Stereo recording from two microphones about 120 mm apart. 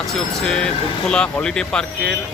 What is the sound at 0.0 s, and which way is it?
Speech, 5° left (ahead or behind).